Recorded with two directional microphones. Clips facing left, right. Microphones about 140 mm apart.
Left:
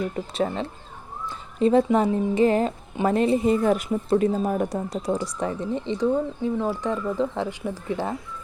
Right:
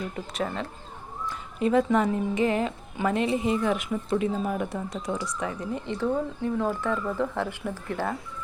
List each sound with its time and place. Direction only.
0.3 s speech: 30° left (ahead or behind)